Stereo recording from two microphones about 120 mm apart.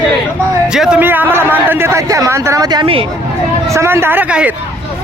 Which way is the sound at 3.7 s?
20° right (ahead or behind).